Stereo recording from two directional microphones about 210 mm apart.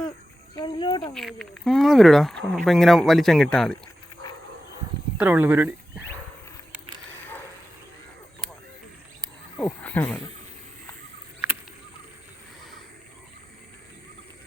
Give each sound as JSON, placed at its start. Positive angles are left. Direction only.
{"t": 0.5, "sound": "speech", "side_deg": 20}
{"t": 1.1, "sound": "speech", "side_deg": 0}
{"t": 5.1, "sound": "speech", "side_deg": -10}
{"t": 9.6, "sound": "speech", "side_deg": 10}